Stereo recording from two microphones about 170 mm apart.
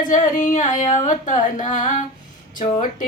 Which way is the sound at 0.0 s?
50° left (ahead or behind).